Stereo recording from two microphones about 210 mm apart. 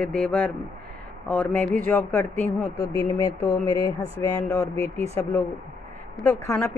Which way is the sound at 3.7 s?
25° right (ahead or behind).